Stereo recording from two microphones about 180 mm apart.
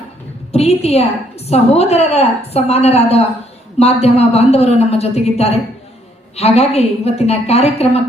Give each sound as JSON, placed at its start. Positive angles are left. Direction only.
{"t": 0.5, "sound": "a woman's voice", "side_deg": 35}